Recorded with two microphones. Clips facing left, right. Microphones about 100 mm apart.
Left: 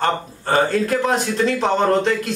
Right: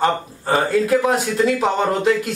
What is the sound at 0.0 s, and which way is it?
Speech, 5° right (ahead or behind).